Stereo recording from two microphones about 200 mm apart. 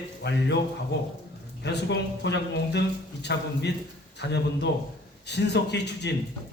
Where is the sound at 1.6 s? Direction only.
60° left (ahead or behind).